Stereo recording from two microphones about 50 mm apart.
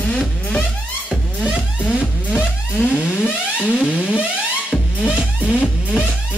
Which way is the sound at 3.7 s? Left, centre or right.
Right.